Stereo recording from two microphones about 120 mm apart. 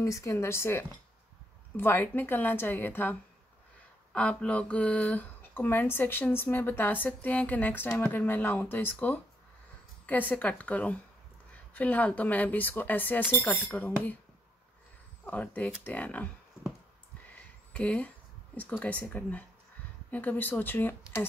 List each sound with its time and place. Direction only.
0.0 s speech: 20° left (ahead or behind)
15.2 s speech: 15° left (ahead or behind)
17.7 s speech: 10° left (ahead or behind)